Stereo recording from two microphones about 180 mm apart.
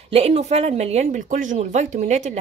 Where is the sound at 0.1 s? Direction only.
35° right (ahead or behind).